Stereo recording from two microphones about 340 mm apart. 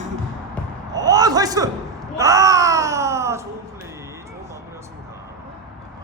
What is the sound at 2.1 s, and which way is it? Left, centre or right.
Wail, centre.